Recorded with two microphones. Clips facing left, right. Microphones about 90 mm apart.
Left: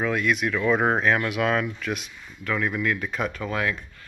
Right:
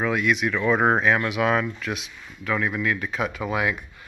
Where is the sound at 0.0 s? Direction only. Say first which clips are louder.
Right 1 dB; centre (ahead or behind).